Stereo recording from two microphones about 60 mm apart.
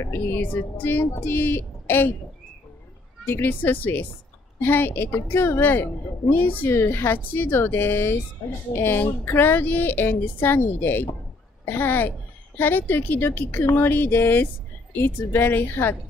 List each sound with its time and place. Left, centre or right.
0.0 s a woman's voice: left
3.3 s a woman's voice: left